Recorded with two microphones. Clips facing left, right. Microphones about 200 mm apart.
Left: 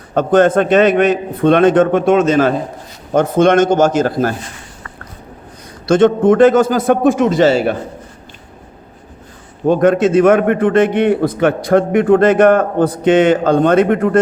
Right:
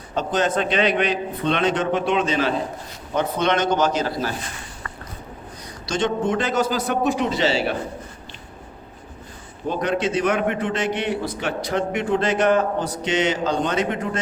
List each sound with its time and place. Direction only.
0.1 s a man's voice: 55° left (ahead or behind)
5.8 s a man's voice: 55° left (ahead or behind)
9.6 s a man's voice: 50° left (ahead or behind)